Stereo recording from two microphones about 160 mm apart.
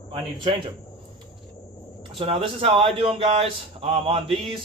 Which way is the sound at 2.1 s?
35° right (ahead or behind).